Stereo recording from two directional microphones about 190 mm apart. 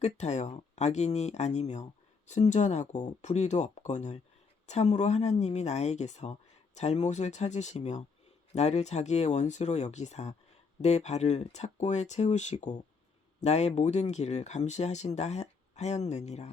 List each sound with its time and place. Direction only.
0.0 s speech: 35° left (ahead or behind)